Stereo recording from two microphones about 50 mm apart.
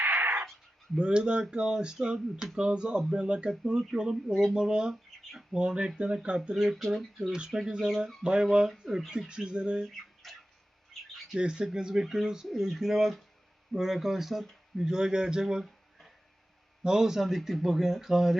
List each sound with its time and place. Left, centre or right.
0.0 s a sound: right
0.9 s speech: centre
4.1 s speech: centre
4.5 s speech: centre
5.5 s speech: centre
6.5 s speech: centre
7.3 s speech: centre
10.2 s a sound: centre
10.9 s bird: centre
11.3 s speech: centre
15.6 s a sound: centre
16.8 s speech: centre